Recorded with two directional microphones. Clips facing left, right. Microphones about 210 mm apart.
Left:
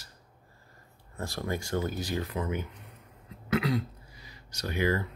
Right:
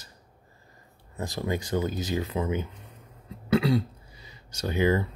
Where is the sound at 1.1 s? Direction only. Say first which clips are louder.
Right 3 dB; 20° right (ahead or behind).